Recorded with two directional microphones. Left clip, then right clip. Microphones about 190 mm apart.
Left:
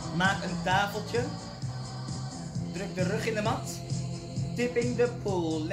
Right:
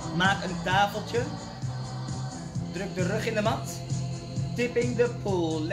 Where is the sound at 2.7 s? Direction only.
15° right (ahead or behind).